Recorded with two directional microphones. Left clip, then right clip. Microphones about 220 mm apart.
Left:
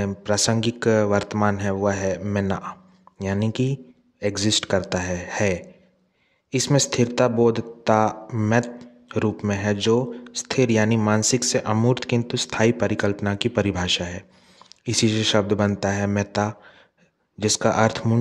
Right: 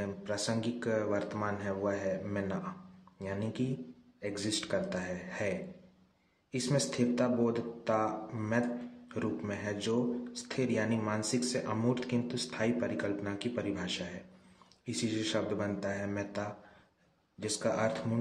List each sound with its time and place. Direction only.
0.0 s speech: 50° left (ahead or behind)